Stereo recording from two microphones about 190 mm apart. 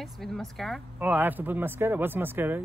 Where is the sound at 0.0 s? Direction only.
Centre (ahead or behind).